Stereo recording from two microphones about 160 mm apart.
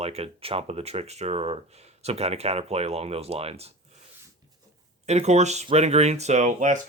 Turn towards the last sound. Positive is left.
turn(degrees=-50)  # may be behind; listen again after turning